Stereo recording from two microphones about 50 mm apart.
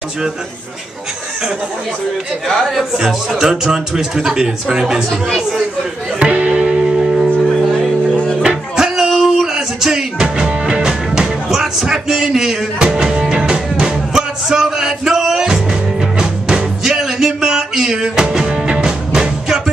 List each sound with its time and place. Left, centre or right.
2.4 s speech: centre
3.3 s speech: centre
6.1 s music: right
9.1 s a sound: centre
9.5 s a sound: centre
10.1 s music: centre